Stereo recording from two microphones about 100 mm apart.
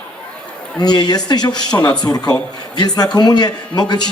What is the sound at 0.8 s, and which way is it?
A man's voice, 45° left (ahead or behind).